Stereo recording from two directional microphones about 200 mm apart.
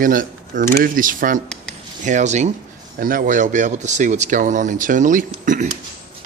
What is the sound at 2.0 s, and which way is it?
Speech, 35° right (ahead or behind).